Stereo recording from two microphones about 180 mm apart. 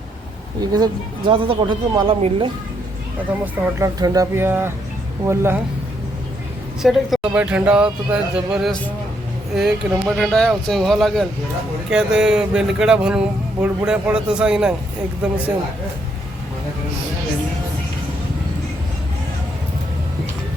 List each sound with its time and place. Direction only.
0.6 s speech: 20° right (ahead or behind)
3.2 s speech: 10° right (ahead or behind)
6.8 s speech: 5° right (ahead or behind)